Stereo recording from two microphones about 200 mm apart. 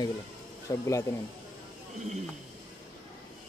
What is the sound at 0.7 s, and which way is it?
Speech, 15° left (ahead or behind).